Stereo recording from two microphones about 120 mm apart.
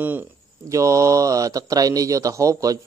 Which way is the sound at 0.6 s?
25° right (ahead or behind).